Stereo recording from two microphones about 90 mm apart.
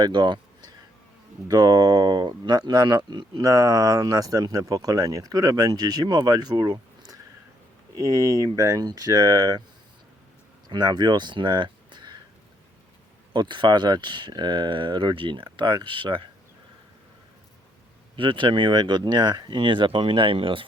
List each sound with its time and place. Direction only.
0.0 s speech: 55° right (ahead or behind)
1.5 s speech: 45° right (ahead or behind)
3.4 s speech: 40° right (ahead or behind)
10.7 s speech: 55° right (ahead or behind)
13.3 s speech: 55° right (ahead or behind)
18.2 s speech: 65° right (ahead or behind)